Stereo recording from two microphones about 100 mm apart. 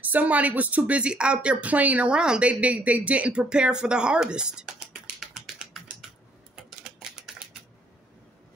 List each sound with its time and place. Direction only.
0.0 s speech: 15° right (ahead or behind)
6.5 s typewriter: 5° right (ahead or behind)